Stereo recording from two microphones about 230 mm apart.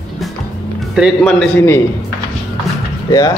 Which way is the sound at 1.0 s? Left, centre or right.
Centre.